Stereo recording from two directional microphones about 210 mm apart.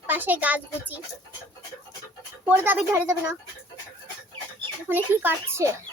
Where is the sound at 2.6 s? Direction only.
10° right (ahead or behind).